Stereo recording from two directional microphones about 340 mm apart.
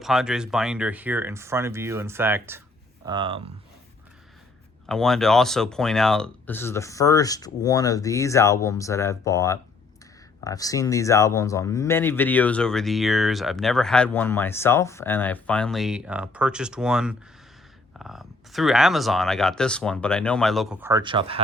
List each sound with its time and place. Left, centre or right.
0.0 s speech: centre
4.9 s speech: centre